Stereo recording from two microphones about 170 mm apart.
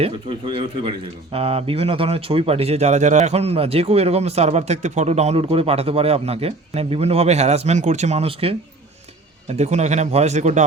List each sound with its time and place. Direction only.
0.0 s speech: 30° right (ahead or behind)